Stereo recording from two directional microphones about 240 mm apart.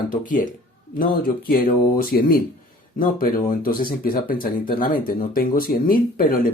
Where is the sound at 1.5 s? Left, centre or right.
Left.